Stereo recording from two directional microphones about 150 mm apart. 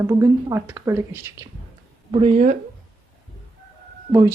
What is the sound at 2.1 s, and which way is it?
Speech, 40° right (ahead or behind).